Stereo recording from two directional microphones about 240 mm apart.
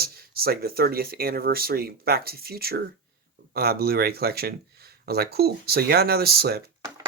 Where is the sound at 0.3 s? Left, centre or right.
Right.